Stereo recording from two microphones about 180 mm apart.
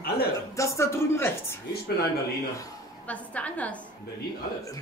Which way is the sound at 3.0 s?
10° left (ahead or behind).